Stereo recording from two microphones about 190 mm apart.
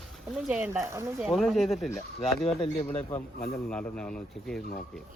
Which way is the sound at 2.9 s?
35° left (ahead or behind).